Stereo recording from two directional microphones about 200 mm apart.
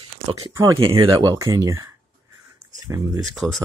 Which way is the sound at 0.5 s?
15° right (ahead or behind).